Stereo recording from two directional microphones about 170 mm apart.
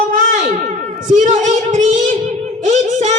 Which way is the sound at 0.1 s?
55° right (ahead or behind).